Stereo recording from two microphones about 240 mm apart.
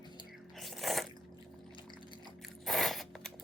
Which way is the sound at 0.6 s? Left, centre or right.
Centre.